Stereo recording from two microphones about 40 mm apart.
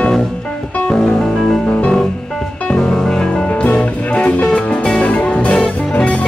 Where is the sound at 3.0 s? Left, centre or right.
Centre.